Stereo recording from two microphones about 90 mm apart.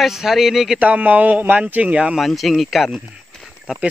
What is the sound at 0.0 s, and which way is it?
Speech, 5° right (ahead or behind).